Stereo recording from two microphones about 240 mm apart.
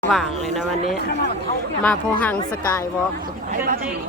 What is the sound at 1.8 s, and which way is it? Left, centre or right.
Speech, centre.